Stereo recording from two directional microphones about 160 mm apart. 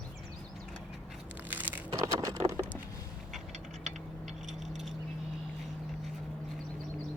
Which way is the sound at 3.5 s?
50° right (ahead or behind).